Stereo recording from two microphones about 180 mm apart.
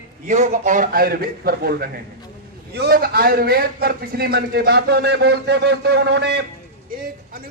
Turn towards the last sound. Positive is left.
turn(degrees=-65)  # may be behind; listen again after turning